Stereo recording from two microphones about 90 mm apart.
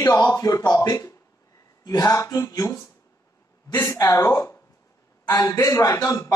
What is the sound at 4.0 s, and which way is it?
A man's voice, 45° left (ahead or behind).